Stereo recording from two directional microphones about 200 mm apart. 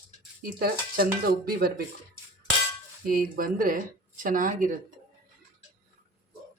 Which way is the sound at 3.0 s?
45° right (ahead or behind).